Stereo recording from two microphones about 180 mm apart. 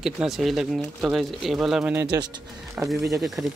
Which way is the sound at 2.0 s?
25° right (ahead or behind).